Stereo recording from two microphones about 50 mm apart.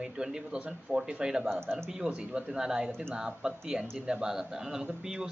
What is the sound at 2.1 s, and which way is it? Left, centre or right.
Speech, right.